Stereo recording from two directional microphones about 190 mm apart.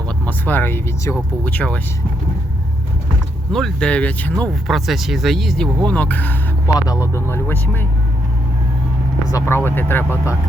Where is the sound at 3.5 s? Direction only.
5° left (ahead or behind).